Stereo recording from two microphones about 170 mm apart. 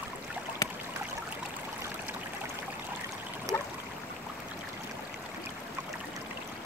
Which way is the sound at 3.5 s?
20° right (ahead or behind).